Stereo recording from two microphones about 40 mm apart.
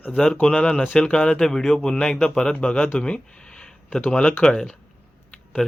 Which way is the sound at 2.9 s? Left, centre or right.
Left.